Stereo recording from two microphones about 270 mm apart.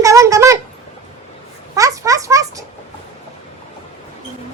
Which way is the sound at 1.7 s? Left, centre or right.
Centre.